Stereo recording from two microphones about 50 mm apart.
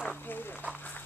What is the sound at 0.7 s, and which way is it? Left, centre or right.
Run, left.